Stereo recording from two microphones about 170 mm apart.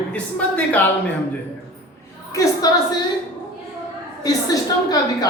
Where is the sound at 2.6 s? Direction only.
20° left (ahead or behind).